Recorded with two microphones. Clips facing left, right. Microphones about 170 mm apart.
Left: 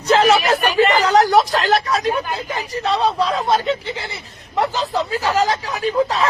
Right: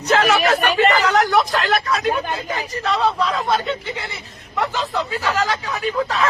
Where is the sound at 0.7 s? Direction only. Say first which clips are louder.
Left 3 dB; 40° right (ahead or behind).